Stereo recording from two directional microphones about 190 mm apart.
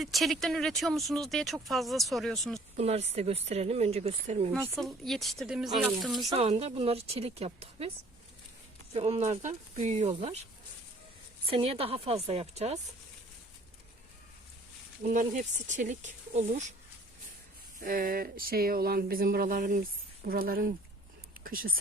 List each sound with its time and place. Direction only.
0.0 s speech: centre (ahead or behind)
2.7 s speech: 35° right (ahead or behind)
4.8 s speech: centre (ahead or behind)
6.3 s speech: 30° right (ahead or behind)
8.9 s speech: 35° right (ahead or behind)
11.4 s speech: 30° right (ahead or behind)
15.0 s speech: 40° right (ahead or behind)
17.7 s speech: 50° right (ahead or behind)